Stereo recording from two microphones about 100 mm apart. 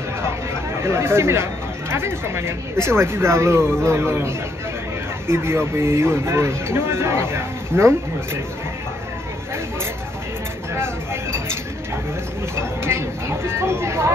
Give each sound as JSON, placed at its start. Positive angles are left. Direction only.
{"t": 0.8, "sound": "a man's voice", "side_deg": -25}
{"t": 5.3, "sound": "a man's voice", "side_deg": -25}
{"t": 12.5, "sound": "speech", "side_deg": -25}